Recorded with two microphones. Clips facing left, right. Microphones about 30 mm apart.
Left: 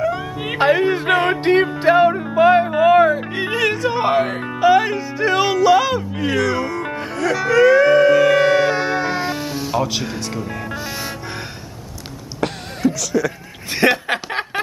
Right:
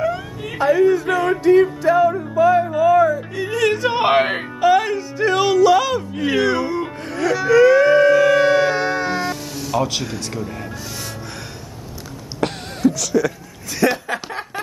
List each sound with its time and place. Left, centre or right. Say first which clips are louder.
0.4 s music: even; left
4.0 s speech: right 2 dB; right
4.6 s speech: left 2 dB; centre
6.3 s music: right 1 dB; centre
7.2 s a sound: right 1 dB; centre
9.2 s music: left 2 dB; left
10.0 s speech: left 1 dB; centre
12.4 s a sound: right 1 dB; centre
13.7 s snicker: left 2 dB; left